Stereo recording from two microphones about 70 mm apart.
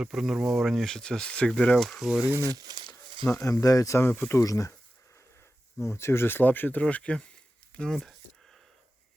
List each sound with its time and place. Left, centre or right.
0.0 s speech: centre
2.4 s speech: right
3.3 s speech: left
3.9 s speech: left
4.4 s speech: left
5.8 s speech: left
6.8 s speech: centre